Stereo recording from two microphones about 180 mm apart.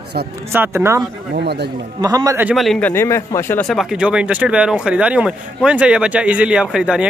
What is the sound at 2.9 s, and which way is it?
Speech, 15° left (ahead or behind).